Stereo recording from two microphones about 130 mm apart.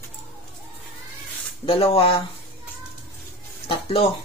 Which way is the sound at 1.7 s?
45° left (ahead or behind).